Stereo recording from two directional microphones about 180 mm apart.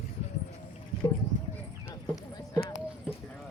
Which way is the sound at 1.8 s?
15° left (ahead or behind).